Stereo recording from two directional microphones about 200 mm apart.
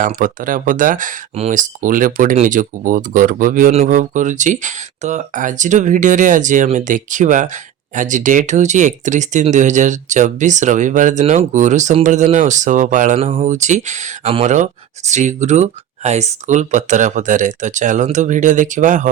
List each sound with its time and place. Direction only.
0.0 s speech: 40° right (ahead or behind)